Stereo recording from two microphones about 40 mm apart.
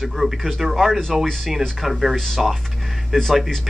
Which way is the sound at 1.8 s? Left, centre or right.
Centre.